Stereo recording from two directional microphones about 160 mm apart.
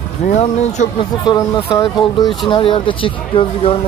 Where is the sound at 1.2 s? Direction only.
25° left (ahead or behind).